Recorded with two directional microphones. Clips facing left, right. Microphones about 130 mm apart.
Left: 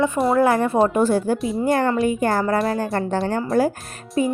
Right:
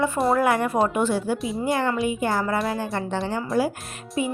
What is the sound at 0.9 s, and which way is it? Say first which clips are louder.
Speech: left 4 dB; 40° left (ahead or behind).